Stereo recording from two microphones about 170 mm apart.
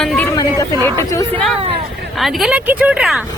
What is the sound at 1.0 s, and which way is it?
Speech, 20° left (ahead or behind).